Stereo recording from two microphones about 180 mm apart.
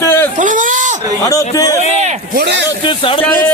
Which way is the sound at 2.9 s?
30° left (ahead or behind).